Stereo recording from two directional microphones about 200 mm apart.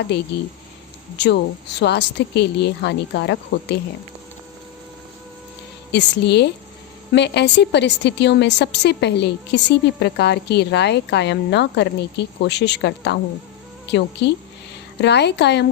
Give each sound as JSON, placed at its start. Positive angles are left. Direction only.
{"t": 0.1, "sound": "a woman's voice", "side_deg": 55}
{"t": 5.9, "sound": "a woman's voice", "side_deg": 60}